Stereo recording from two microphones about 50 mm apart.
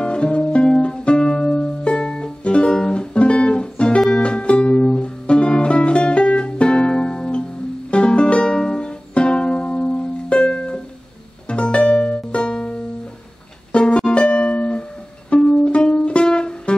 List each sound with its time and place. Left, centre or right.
0.0 s music: left